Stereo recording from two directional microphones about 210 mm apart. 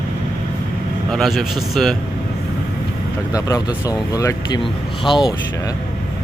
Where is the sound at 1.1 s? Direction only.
Centre (ahead or behind).